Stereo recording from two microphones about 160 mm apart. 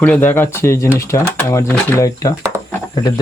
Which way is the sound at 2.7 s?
25° left (ahead or behind).